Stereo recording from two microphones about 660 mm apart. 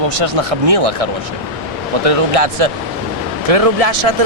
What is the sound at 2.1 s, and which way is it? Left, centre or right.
Speech, right.